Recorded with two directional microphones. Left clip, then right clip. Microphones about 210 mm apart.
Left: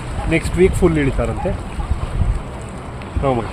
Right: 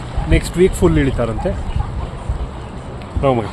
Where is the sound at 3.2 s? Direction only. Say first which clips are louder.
Right 3 dB; 30° right (ahead or behind).